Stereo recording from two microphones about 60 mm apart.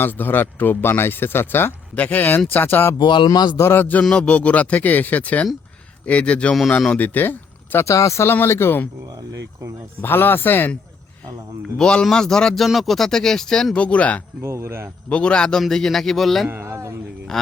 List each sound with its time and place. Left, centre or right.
0.0 s speech: left
2.0 s speech: left
4.1 s speech: centre; by 7.9 s left
7.9 s speech: left
8.3 s speech: left
9.3 s speech: right
10.0 s speech: left
11.6 s speech: centre
13.7 s speech: left
14.4 s speech: right
15.1 s speech: centre
16.5 s a sound: right
17.3 s speech: centre